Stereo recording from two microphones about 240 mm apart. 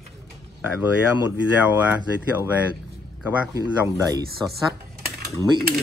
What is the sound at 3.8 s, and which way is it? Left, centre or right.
Speech, centre.